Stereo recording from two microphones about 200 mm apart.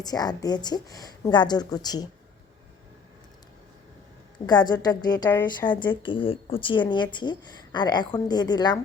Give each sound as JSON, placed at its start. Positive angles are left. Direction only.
{"t": 0.0, "sound": "speech", "side_deg": 20}
{"t": 4.4, "sound": "speech", "side_deg": 20}